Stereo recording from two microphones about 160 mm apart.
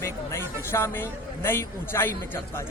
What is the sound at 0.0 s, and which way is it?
A man's voice, 15° left (ahead or behind).